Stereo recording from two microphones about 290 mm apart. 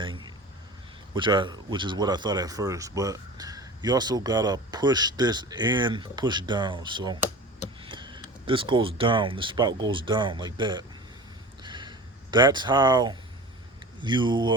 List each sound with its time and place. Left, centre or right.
1.1 s speech: centre
11.6 s a sound: centre
14.0 s speech: centre